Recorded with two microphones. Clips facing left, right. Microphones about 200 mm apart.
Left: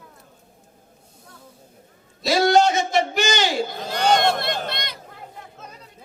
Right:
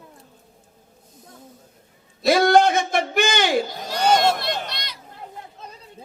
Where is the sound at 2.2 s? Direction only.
55° right (ahead or behind).